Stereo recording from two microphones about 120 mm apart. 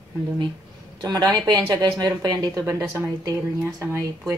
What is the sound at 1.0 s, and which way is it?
Speech, 30° right (ahead or behind).